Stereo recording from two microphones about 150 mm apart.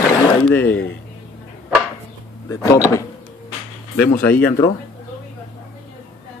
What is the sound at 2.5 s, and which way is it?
Speech, 20° left (ahead or behind).